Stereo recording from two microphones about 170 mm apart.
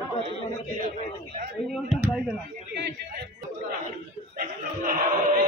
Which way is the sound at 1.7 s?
5° right (ahead or behind).